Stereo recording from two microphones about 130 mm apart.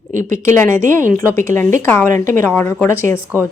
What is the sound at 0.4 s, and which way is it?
A woman's voice, 20° left (ahead or behind).